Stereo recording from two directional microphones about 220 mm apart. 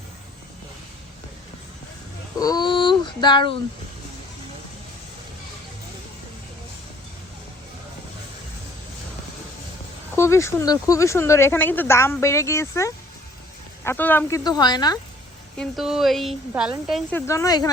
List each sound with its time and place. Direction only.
2.4 s a sound: 20° left (ahead or behind)
10.2 s speech: 10° left (ahead or behind)
15.5 s a woman's voice: centre (ahead or behind); by 17.7 s 15° left (ahead or behind)